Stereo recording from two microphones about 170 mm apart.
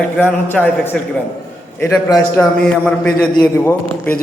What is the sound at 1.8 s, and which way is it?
Speech, 20° left (ahead or behind).